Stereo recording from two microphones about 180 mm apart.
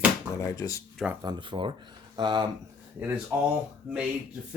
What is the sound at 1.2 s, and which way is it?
Speech, 25° right (ahead or behind).